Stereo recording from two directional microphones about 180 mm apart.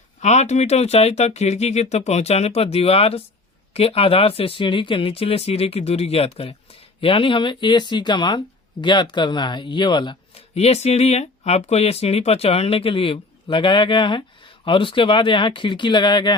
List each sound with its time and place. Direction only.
0.2 s a man's voice: 40° left (ahead or behind); by 16.3 s 25° left (ahead or behind)